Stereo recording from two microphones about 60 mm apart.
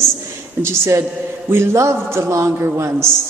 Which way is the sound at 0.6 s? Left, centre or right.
Right.